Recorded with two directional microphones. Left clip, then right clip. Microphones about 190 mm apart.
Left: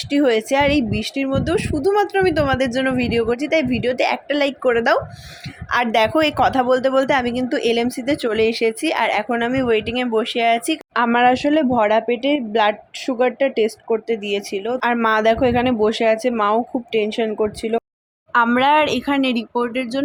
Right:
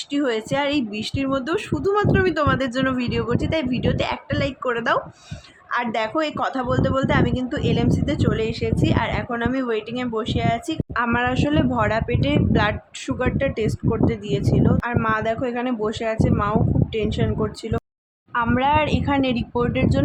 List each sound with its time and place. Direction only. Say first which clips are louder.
0.1 s a woman's voice: left 6 dB; 15° left (ahead or behind)